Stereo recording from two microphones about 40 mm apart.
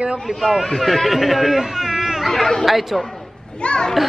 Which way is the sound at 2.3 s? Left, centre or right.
Centre.